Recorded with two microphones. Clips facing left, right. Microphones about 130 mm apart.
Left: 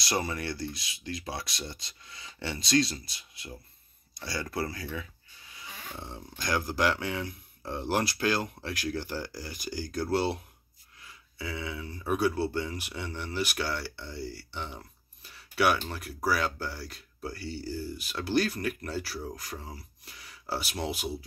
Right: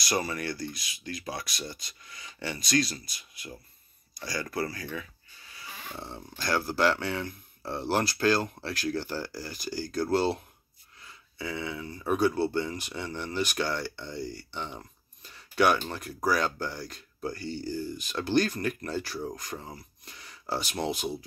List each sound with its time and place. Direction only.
0.0 s speech: 25° left (ahead or behind)
5.7 s a sound: 5° right (ahead or behind)
6.3 s speech: 15° left (ahead or behind)
11.4 s speech: 5° left (ahead or behind)
15.2 s a sound: 5° left (ahead or behind)
15.9 s speech: 5° left (ahead or behind)